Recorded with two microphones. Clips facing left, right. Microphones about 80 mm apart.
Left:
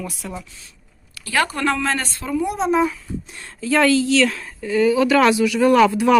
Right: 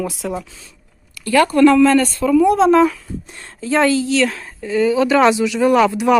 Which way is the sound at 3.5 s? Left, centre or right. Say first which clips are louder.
Right 1 dB; right.